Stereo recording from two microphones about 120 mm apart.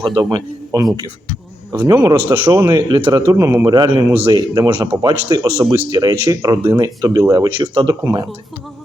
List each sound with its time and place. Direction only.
0.1 s speech: 35° right (ahead or behind)
1.9 s a man's voice: 30° right (ahead or behind)
3.7 s speech: 35° right (ahead or behind)